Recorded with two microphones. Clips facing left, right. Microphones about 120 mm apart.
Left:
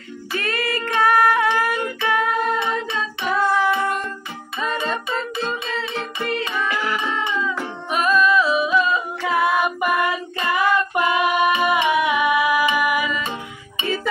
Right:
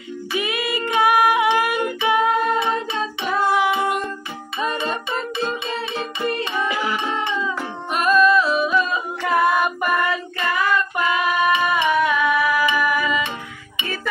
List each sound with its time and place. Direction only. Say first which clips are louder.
0.3 s music: even; 10° right (ahead or behind)
5.9 s music: right 2 dB; 10° right (ahead or behind)
7.9 s singing: right 2 dB; centre (ahead or behind)
10.4 s female singing: left 2 dB; 20° left (ahead or behind)
12.7 s music: even; 15° left (ahead or behind)